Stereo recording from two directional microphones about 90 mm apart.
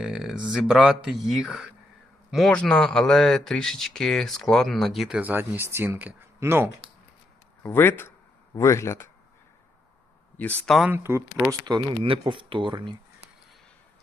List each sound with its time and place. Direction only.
0.0 s speech: 10° right (ahead or behind)
2.3 s speech: 5° left (ahead or behind)
5.2 s speech: 20° right (ahead or behind)
7.6 s speech: 25° left (ahead or behind)
10.3 s speech: 20° left (ahead or behind)
10.9 s speech: 30° right (ahead or behind)
11.6 s speech: 55° right (ahead or behind)
12.0 s speech: 75° right (ahead or behind); by 13.0 s 60° right (ahead or behind)